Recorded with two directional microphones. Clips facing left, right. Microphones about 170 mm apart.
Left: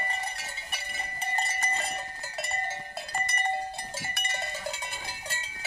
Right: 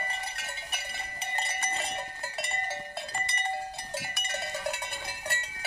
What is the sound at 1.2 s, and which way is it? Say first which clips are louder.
Cowbell: left 3 dB; 45° left (ahead or behind).